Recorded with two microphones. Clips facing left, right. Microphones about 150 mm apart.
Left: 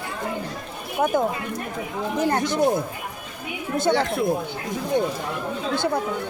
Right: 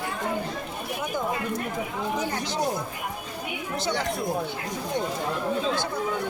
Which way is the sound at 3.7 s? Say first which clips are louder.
Left 7 dB; 55° left (ahead or behind).